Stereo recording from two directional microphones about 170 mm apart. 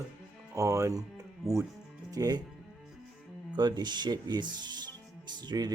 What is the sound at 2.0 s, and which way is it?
Speech, 20° right (ahead or behind).